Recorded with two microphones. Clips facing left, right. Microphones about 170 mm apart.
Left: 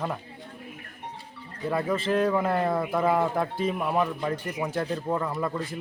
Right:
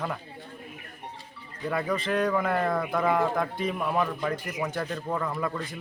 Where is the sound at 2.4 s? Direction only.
25° left (ahead or behind).